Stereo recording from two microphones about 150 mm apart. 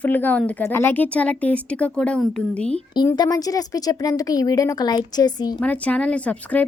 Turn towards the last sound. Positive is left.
turn(degrees=10)  # may be behind; listen again after turning